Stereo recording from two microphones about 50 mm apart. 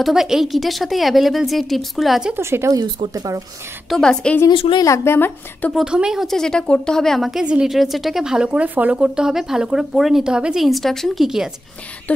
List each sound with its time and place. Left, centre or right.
0.0 s a woman's voice: centre
2.4 s speech: right
4.0 s speech: centre
4.4 s a woman's voice: left
5.9 s speech: centre
6.2 s speech: centre
7.2 s a woman's voice: centre
8.5 s speech: right
9.1 s a woman's voice: centre
10.2 s speech: centre
10.6 s a woman's voice: centre
11.2 s speech: centre